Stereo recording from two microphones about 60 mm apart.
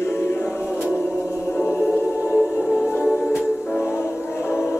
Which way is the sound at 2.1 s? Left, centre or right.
Right.